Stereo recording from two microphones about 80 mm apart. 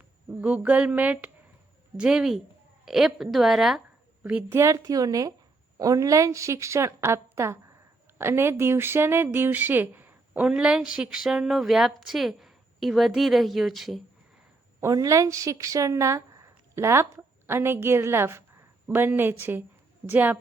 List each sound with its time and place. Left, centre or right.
0.4 s a sound: centre
2.0 s a woman's voice: centre
4.2 s a woman's voice: right
4.5 s a woman's voice: right; by 14.0 s centre
14.9 s speech: right
18.9 s a sound: right